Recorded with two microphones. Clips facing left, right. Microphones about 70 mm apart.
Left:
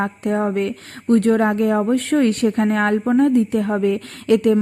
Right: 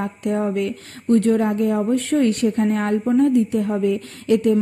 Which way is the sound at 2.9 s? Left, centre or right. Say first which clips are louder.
Even; left.